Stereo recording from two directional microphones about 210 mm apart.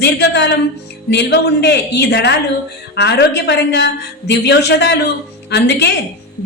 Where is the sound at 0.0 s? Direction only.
55° left (ahead or behind).